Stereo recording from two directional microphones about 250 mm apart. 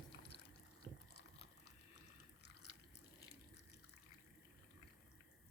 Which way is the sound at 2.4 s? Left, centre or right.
Left.